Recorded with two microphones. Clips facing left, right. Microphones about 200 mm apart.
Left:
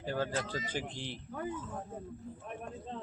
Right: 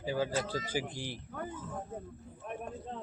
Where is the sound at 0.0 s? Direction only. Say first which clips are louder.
Right 2 dB; 10° right (ahead or behind).